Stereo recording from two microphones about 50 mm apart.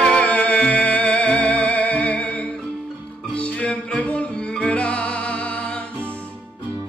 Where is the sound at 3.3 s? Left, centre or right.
Left.